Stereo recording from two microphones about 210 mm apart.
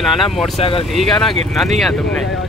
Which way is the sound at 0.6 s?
25° left (ahead or behind).